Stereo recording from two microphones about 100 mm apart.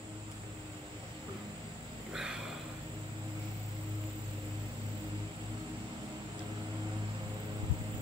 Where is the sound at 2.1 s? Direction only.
5° right (ahead or behind).